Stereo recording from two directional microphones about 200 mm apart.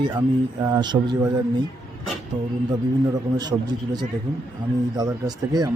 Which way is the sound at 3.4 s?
20° right (ahead or behind).